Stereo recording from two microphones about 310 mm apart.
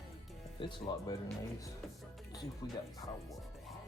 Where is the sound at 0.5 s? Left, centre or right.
Centre.